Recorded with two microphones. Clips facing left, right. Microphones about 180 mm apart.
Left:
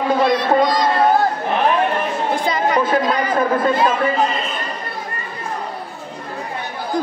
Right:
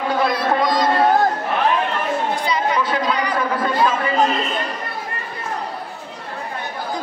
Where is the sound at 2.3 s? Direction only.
50° left (ahead or behind).